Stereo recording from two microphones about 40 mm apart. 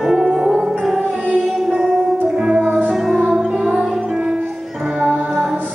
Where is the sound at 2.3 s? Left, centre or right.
Centre.